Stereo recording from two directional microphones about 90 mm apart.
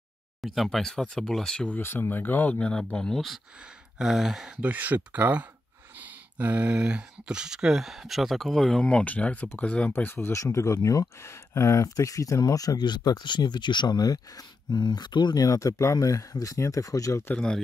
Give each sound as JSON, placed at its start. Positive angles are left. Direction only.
{"t": 0.4, "sound": "speech", "side_deg": 0}
{"t": 1.7, "sound": "speech", "side_deg": 25}